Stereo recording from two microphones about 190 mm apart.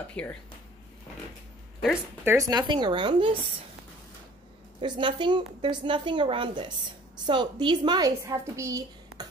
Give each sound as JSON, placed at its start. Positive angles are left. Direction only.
{"t": 0.1, "sound": "speech", "side_deg": 5}
{"t": 2.2, "sound": "a woman's voice", "side_deg": -15}
{"t": 4.7, "sound": "a woman's voice", "side_deg": -25}